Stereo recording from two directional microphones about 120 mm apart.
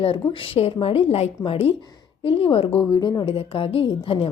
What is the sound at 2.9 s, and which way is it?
Speech, 35° left (ahead or behind).